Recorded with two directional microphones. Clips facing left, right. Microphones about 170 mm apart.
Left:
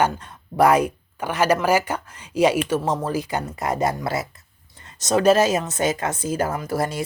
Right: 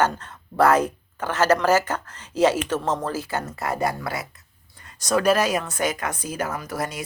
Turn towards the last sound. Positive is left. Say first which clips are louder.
# left 5 dB
turn(degrees=30)  # may be behind; listen again after turning